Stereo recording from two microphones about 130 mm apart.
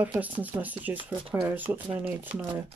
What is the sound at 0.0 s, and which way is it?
Speech, 10° right (ahead or behind).